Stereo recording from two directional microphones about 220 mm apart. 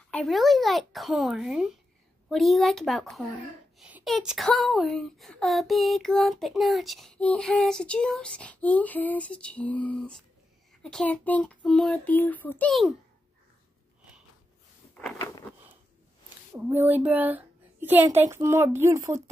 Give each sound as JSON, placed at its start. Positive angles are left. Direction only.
{"t": 0.1, "sound": "speech", "side_deg": 0}
{"t": 15.0, "sound": "a sound", "side_deg": 10}
{"t": 16.5, "sound": "a woman's voice", "side_deg": -10}